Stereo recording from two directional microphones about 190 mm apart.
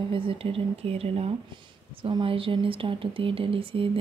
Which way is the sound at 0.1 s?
30° right (ahead or behind).